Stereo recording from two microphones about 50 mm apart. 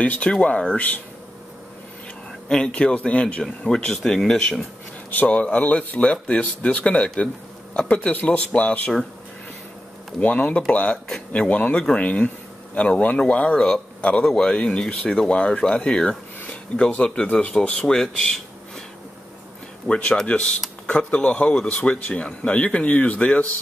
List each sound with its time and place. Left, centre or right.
0.0 s speech: left
2.4 s speech: centre
5.1 s speech: left
10.2 s speech: left
11.1 s speech: centre
11.4 s speech: left
16.3 s speech: left; by 18.4 s centre
19.9 s speech: left